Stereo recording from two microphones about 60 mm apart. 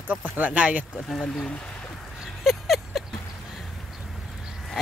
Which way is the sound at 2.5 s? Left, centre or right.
Centre.